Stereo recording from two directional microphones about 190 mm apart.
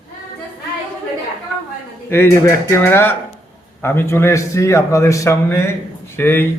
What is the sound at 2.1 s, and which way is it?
Speech, 10° left (ahead or behind).